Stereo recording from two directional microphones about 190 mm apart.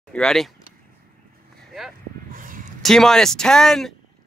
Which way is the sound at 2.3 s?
45° right (ahead or behind).